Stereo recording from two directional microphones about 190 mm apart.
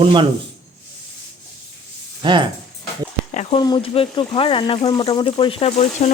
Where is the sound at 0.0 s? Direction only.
25° right (ahead or behind).